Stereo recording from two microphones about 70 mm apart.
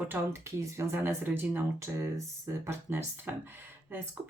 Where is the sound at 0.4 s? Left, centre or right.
Right.